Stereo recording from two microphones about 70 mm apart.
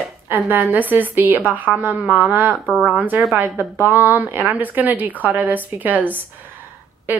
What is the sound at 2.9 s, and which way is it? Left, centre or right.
Speech, right.